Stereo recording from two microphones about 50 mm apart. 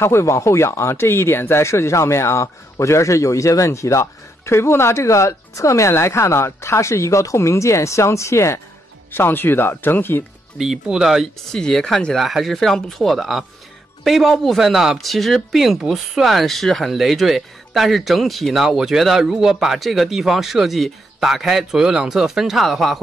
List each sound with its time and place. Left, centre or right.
0.0 s speech: left
9.1 s speech: left
10.6 s speech: centre
11.5 s speech: centre
12.2 s speech: centre